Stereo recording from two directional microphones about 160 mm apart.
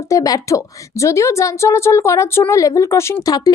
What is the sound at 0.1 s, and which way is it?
A woman's voice, 20° left (ahead or behind).